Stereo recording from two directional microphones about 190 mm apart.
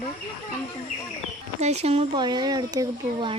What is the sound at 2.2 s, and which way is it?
Speech, 20° right (ahead or behind).